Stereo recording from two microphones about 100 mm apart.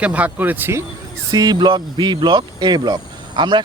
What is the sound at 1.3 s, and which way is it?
Speech, 45° right (ahead or behind).